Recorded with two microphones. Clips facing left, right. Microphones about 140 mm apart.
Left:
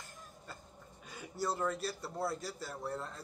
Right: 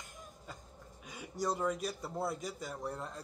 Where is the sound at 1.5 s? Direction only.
10° right (ahead or behind).